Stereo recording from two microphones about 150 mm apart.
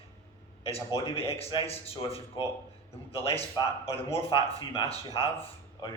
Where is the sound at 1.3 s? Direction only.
40° left (ahead or behind).